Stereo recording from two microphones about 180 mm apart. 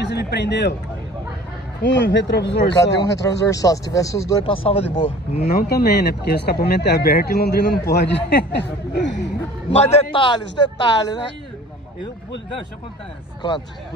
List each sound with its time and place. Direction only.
0.0 s speech: 70° left (ahead or behind)
1.8 s speech: 75° left (ahead or behind)
3.2 s speech: 20° left (ahead or behind)
4.6 s speech: 35° left (ahead or behind)
5.4 s speech: 55° left (ahead or behind); by 9.3 s 75° left (ahead or behind)
9.7 s speech: 35° left (ahead or behind)